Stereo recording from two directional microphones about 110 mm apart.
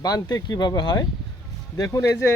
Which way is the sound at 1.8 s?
25° left (ahead or behind).